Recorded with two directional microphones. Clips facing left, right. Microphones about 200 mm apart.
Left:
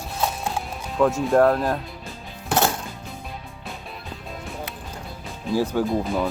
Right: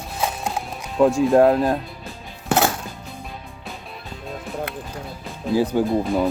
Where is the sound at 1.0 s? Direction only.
20° right (ahead or behind).